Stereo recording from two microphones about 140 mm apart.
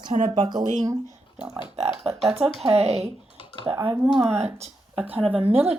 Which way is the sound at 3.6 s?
15° right (ahead or behind).